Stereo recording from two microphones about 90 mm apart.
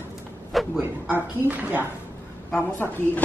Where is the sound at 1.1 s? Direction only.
20° right (ahead or behind).